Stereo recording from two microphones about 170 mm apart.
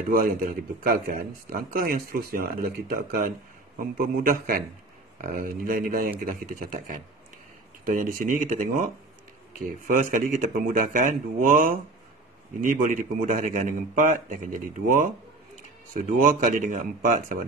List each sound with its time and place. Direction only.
0.1 s a man's voice: 55° right (ahead or behind)